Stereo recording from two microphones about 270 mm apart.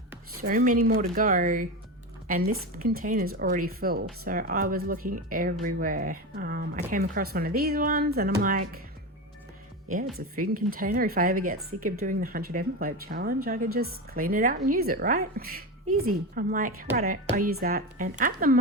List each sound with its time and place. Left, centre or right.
0.1 s speech: right
2.8 s speech: right
10.2 s speech: right
16.3 s speech: right